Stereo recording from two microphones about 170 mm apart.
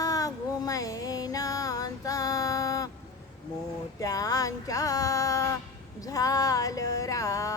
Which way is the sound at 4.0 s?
20° left (ahead or behind).